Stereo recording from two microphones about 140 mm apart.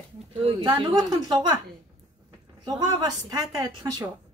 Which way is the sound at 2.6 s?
30° right (ahead or behind).